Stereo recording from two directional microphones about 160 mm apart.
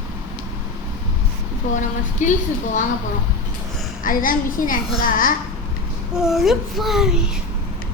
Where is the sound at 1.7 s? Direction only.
50° left (ahead or behind).